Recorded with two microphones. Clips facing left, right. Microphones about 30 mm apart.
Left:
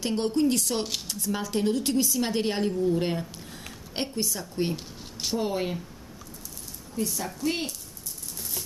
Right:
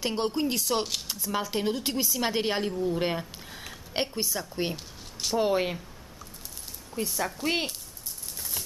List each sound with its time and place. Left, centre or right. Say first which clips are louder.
0.0 s a woman's voice: left 3 dB; centre
4.7 s a sound: left 2 dB; centre
5.4 s speech: right 4 dB; right
7.0 s speech: even; right